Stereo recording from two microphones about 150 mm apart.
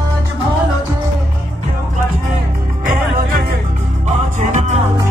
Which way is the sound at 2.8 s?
65° right (ahead or behind).